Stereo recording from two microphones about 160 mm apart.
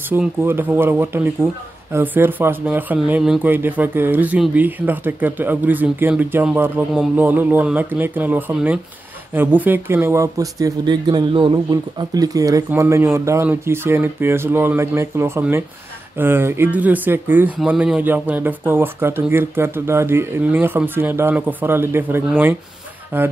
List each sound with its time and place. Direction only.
0.1 s speech: 10° right (ahead or behind)